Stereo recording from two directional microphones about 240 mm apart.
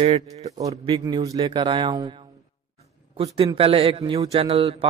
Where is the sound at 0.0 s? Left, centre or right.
Right.